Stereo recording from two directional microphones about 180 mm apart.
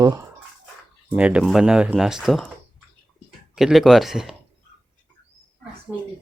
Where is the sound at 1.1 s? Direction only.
5° right (ahead or behind).